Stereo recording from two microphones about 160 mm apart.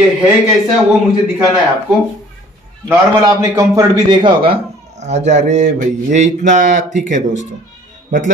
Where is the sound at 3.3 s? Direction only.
20° right (ahead or behind).